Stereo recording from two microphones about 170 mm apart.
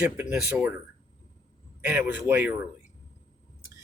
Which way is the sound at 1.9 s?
10° right (ahead or behind).